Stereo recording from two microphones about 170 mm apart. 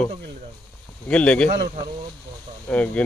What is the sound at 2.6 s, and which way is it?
Speech, 10° left (ahead or behind).